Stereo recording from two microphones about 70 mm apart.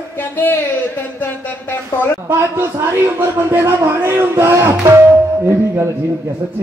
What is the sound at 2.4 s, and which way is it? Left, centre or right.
A man's voice, right.